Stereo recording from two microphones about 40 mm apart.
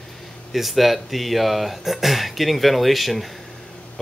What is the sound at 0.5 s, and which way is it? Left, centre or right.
Speech, centre.